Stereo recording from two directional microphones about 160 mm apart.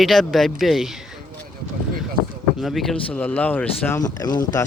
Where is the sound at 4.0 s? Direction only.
25° left (ahead or behind).